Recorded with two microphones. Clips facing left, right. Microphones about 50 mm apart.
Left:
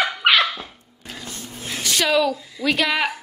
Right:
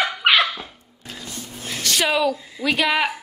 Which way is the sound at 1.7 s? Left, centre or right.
Centre.